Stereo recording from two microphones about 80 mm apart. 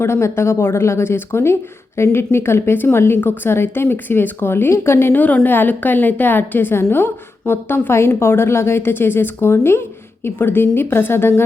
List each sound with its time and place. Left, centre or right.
0.0 s a woman's voice: left